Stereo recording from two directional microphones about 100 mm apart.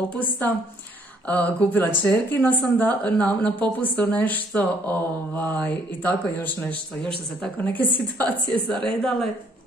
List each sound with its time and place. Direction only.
0.1 s a woman's voice: 15° left (ahead or behind)